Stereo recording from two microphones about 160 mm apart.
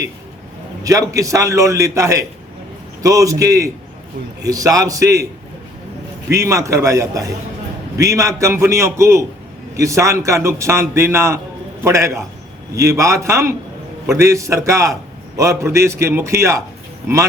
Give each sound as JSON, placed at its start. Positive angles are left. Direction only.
{"t": 0.9, "sound": "a man's voice", "side_deg": -20}
{"t": 6.2, "sound": "a man's voice", "side_deg": -20}